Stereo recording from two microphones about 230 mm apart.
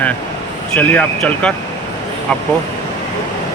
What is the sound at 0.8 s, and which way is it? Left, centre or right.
Speech, centre.